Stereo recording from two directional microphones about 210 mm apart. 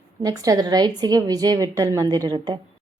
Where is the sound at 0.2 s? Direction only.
15° right (ahead or behind).